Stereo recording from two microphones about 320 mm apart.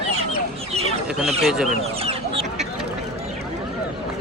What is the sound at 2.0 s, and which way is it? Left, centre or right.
Chicken, centre.